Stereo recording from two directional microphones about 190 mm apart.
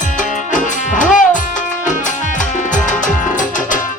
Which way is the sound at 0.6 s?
40° left (ahead or behind).